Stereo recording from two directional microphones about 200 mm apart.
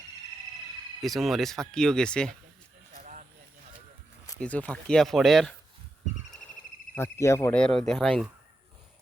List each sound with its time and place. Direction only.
1.0 s speech: centre (ahead or behind)
2.9 s a sound: 40° right (ahead or behind)
4.4 s speech: 5° left (ahead or behind)
6.9 s speech: 15° left (ahead or behind)